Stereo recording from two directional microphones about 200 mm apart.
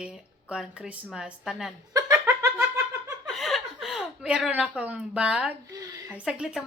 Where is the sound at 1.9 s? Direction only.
20° right (ahead or behind).